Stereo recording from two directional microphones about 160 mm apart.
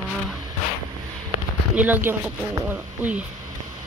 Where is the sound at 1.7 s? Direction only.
10° right (ahead or behind).